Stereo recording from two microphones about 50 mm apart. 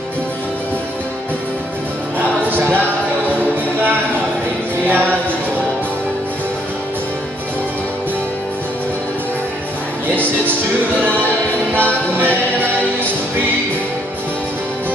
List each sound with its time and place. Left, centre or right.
2.1 s music: right
4.8 s music: right
11.7 s music: right